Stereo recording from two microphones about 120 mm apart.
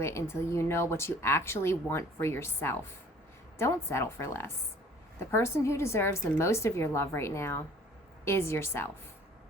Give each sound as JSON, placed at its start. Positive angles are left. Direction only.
{"t": 0.0, "sound": "speech", "side_deg": 20}